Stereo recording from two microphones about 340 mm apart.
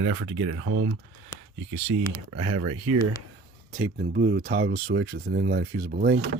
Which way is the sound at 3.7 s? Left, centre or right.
Right.